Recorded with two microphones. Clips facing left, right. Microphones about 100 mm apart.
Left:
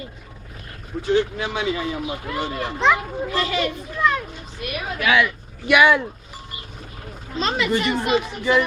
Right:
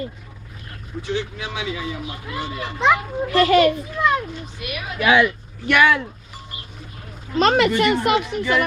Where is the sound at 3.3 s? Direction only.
60° right (ahead or behind).